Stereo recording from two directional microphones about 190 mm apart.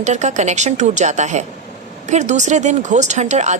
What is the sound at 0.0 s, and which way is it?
A woman's voice, 40° right (ahead or behind).